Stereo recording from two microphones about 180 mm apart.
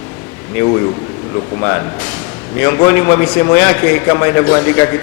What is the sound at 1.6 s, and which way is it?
A man's voice, 15° left (ahead or behind).